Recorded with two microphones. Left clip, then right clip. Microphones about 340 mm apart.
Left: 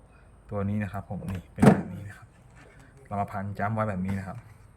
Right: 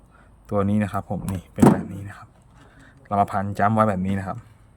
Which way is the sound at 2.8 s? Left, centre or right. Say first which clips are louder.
Right 11 dB; centre.